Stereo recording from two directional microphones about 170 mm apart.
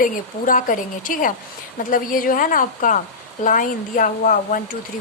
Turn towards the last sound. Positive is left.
turn(degrees=50)  # may be behind; listen again after turning